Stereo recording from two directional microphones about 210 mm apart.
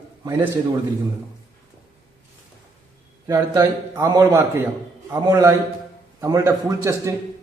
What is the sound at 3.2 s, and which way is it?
A man's voice, 15° right (ahead or behind).